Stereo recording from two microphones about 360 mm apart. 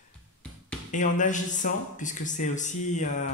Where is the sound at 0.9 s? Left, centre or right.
Left.